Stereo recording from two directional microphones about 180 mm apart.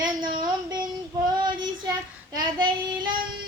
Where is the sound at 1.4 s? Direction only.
25° right (ahead or behind).